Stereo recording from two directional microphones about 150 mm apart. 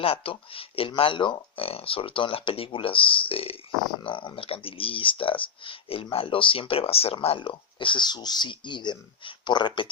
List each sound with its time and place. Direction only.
0.0 s speech: 40° left (ahead or behind)